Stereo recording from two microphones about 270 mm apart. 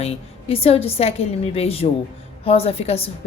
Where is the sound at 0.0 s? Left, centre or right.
Left.